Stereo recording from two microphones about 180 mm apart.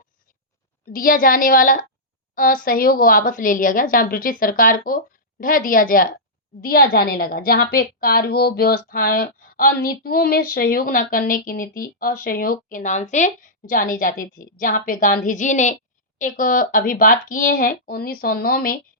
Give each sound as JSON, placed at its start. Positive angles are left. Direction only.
{"t": 0.9, "sound": "a woman's voice", "side_deg": 50}